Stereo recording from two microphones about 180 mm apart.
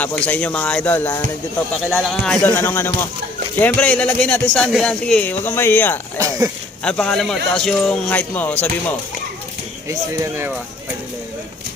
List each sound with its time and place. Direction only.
0.0 s speech: 10° left (ahead or behind)
6.1 s speech: 20° right (ahead or behind)
6.8 s speech: 5° left (ahead or behind)
9.9 s speech: 15° right (ahead or behind)